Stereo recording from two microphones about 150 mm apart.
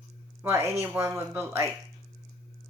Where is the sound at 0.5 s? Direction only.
15° right (ahead or behind).